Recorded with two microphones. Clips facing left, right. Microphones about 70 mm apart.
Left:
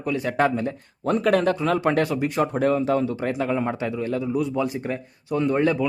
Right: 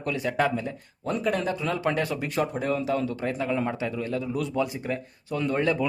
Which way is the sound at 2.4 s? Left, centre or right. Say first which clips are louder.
Left 5 dB; left.